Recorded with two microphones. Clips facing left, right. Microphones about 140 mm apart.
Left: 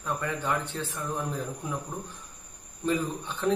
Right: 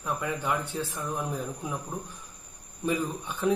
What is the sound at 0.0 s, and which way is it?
Speech, 10° right (ahead or behind).